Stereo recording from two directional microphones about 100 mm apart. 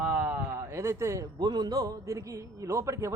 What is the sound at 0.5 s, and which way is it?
Speech, 25° right (ahead or behind).